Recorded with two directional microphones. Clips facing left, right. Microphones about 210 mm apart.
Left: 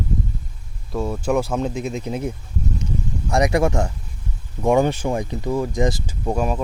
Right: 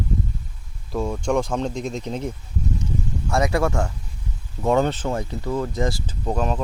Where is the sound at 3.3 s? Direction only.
15° left (ahead or behind).